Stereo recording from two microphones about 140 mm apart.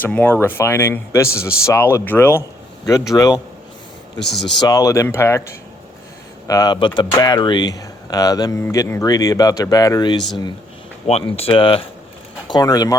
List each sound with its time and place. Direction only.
0.0 s speech: 10° left (ahead or behind)
4.6 s speech: 25° left (ahead or behind)
6.5 s speech: 25° left (ahead or behind)
11.0 s speech: 45° left (ahead or behind)
12.5 s speech: 30° left (ahead or behind)